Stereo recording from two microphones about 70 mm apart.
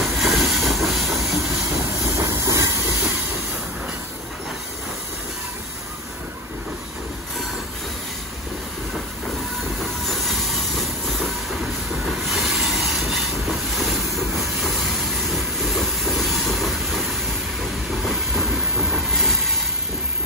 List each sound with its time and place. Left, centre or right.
0.0 s train: centre
2.1 s hiss: right
10.0 s train: centre
18.0 s train: centre